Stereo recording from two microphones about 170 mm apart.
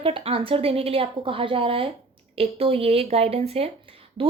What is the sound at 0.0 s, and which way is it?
A woman's voice, 30° right (ahead or behind).